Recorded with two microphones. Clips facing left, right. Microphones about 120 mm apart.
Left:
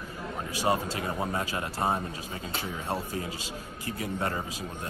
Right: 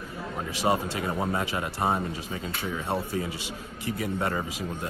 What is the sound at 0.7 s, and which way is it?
Speech, 15° right (ahead or behind).